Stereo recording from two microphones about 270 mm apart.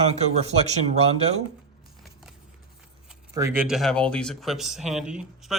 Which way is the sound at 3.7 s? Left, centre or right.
Centre.